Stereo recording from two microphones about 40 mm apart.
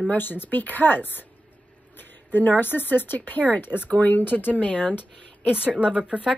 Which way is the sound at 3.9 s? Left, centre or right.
Left.